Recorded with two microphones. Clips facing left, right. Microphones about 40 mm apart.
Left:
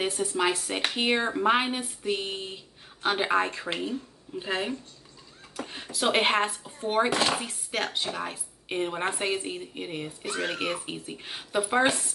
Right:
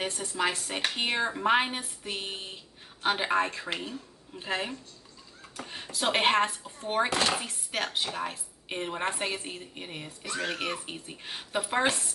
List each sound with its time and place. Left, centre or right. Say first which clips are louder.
0.0 s speech: left 3 dB; centre
10.2 s speech: left 1 dB; left
10.9 s speech: left 3 dB; centre